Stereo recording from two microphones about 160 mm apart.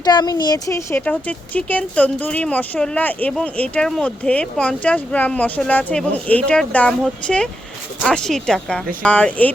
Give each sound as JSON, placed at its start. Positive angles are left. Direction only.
{"t": 0.0, "sound": "speech", "side_deg": 25}